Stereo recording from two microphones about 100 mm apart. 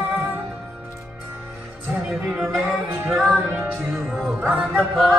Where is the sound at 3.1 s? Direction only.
5° right (ahead or behind).